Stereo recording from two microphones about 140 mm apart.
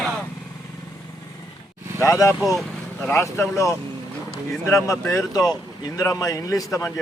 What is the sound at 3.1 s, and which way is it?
A man's voice, 20° left (ahead or behind).